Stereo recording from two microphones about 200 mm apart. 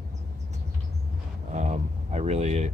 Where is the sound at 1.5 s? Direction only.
35° right (ahead or behind).